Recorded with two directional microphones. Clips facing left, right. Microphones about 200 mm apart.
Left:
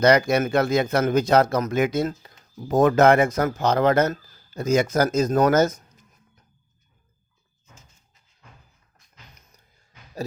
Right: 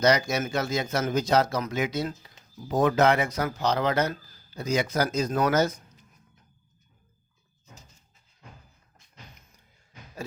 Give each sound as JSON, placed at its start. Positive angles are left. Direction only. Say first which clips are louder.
{"t": 0.0, "sound": "speech", "louder": "left 5 dB", "side_deg": 55}